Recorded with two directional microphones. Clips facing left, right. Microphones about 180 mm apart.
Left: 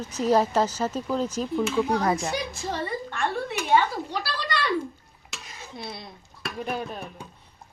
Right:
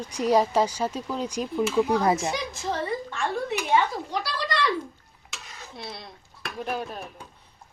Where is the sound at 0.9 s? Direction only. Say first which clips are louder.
Left 4 dB; 5° left (ahead or behind).